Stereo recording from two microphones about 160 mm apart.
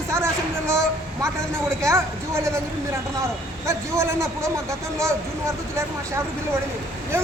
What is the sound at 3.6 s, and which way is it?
Speech, 15° right (ahead or behind).